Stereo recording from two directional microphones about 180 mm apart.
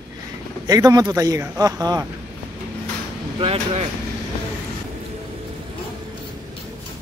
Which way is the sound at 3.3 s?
35° right (ahead or behind).